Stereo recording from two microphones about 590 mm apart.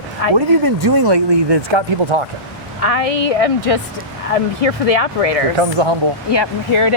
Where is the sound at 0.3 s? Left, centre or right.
Right.